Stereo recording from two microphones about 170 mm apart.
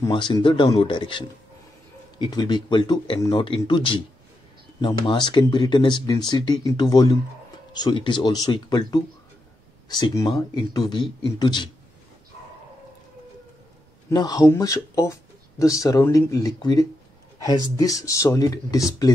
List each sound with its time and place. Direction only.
0.1 s speech: 30° left (ahead or behind)
14.1 s speech: 20° left (ahead or behind)